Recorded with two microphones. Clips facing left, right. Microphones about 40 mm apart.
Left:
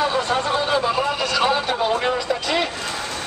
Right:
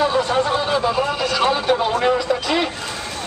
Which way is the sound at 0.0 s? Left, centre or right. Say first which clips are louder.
Right 3 dB; centre.